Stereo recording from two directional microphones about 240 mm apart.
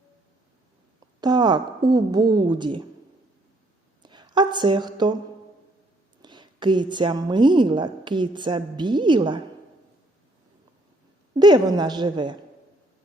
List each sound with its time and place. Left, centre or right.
0.9 s a woman's voice: centre
4.0 s a sound: centre
6.2 s a woman's voice: centre
11.3 s a woman's voice: centre